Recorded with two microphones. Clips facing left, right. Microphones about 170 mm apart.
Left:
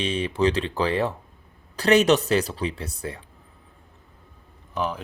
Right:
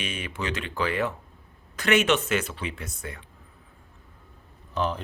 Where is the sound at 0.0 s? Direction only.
30° left (ahead or behind).